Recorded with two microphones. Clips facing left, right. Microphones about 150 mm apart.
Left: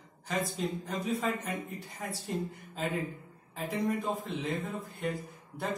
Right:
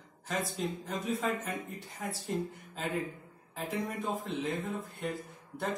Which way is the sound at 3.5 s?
Centre (ahead or behind).